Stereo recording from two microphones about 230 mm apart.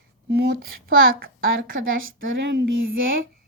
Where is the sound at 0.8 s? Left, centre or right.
Right.